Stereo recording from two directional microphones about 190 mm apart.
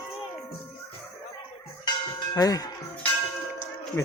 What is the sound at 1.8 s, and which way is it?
Church bell, 20° left (ahead or behind).